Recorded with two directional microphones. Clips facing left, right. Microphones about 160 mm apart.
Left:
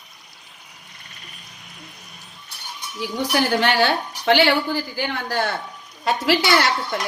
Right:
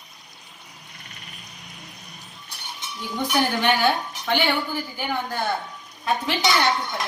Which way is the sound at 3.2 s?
80° left.